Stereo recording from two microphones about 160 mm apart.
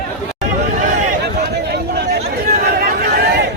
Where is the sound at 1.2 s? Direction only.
90° right.